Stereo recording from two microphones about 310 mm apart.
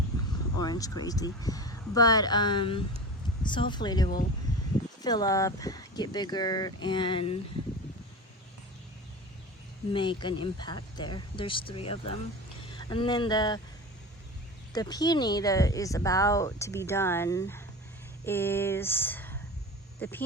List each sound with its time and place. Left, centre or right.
0.6 s speech: centre
9.9 s speech: centre
14.7 s speech: centre